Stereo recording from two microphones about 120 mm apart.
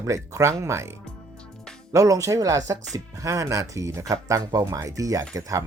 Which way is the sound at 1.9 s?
25° right (ahead or behind).